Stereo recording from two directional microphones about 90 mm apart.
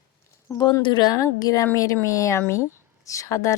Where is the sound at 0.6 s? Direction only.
55° left (ahead or behind).